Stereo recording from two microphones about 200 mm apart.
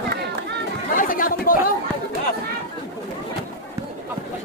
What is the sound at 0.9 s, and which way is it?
Chatter, 45° left (ahead or behind).